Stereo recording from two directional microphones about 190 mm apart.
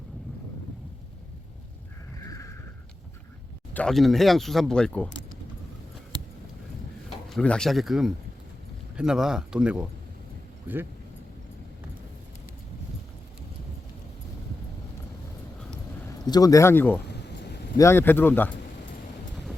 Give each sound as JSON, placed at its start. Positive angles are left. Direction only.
{"t": 2.2, "sound": "horse", "side_deg": 15}
{"t": 3.8, "sound": "speech", "side_deg": 0}
{"t": 7.3, "sound": "speech", "side_deg": 5}
{"t": 16.0, "sound": "speech", "side_deg": 20}
{"t": 17.2, "sound": "a sound", "side_deg": 60}
{"t": 17.7, "sound": "speech", "side_deg": 15}